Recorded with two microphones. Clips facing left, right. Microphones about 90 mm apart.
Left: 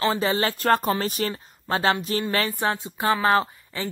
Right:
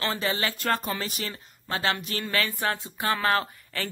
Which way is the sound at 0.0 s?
30° left (ahead or behind).